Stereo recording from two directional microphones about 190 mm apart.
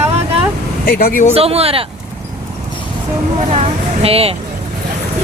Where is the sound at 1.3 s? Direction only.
30° right (ahead or behind).